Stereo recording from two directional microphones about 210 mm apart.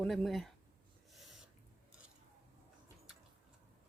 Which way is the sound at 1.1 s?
Centre (ahead or behind).